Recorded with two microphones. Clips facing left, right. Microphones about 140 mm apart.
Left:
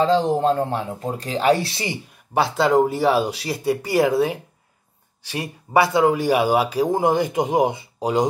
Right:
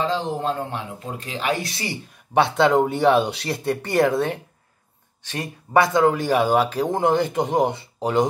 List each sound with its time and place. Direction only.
0.0 s speech: 35° left (ahead or behind)
2.3 s speech: 5° left (ahead or behind)